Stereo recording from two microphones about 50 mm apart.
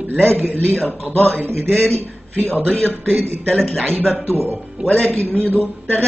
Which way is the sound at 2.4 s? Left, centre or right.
Left.